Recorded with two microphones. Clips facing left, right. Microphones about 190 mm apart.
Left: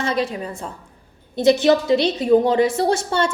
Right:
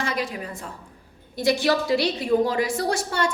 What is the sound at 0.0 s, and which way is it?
A woman's voice, 25° left (ahead or behind).